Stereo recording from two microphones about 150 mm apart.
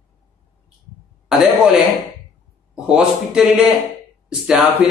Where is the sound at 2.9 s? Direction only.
5° right (ahead or behind).